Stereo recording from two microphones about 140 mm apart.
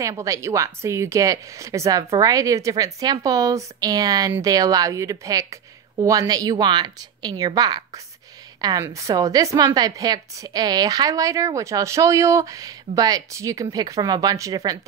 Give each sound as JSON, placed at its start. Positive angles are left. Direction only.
{"t": 0.0, "sound": "a woman's voice", "side_deg": -25}